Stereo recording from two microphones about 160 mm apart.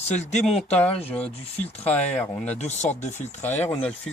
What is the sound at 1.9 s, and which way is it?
Speech, 10° left (ahead or behind).